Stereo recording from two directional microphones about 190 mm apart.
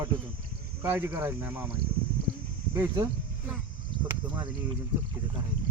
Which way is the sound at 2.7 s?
15° right (ahead or behind).